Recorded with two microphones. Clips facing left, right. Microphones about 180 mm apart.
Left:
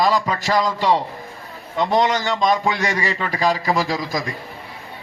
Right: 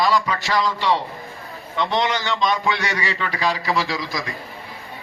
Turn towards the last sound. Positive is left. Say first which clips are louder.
# left 3 dB
turn(degrees=45)  # may be behind; listen again after turning